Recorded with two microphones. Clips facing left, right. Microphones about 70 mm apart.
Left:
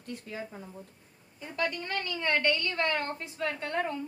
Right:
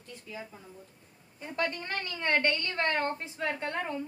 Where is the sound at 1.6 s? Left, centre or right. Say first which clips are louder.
Left 1 dB; right.